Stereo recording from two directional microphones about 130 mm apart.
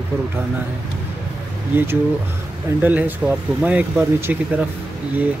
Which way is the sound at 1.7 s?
20° right (ahead or behind).